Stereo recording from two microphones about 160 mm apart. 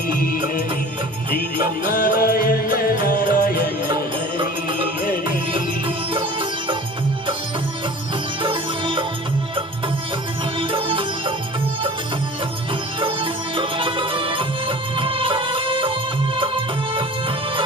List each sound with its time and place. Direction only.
1.9 s music: 65° left (ahead or behind)
6.1 s music: 30° right (ahead or behind)
8.4 s music: 30° right (ahead or behind)
10.6 s music: 30° right (ahead or behind)
13.0 s music: 30° right (ahead or behind)